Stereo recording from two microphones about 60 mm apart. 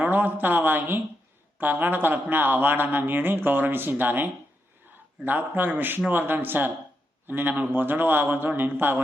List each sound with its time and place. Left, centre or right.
0.0 s speech: right